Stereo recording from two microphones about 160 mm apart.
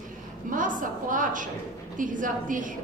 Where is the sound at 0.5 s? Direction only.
55° right (ahead or behind).